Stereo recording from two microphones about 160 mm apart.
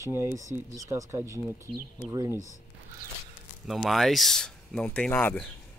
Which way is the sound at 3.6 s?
Centre (ahead or behind).